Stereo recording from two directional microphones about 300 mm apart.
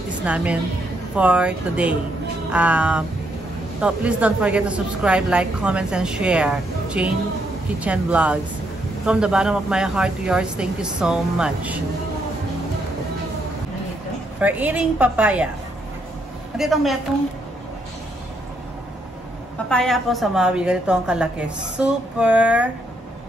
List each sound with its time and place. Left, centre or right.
0.2 s speech: centre
14.4 s speech: centre
16.5 s speech: centre
19.7 s speech: centre